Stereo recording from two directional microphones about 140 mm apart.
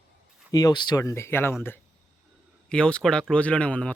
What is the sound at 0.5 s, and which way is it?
Speech, 30° left (ahead or behind).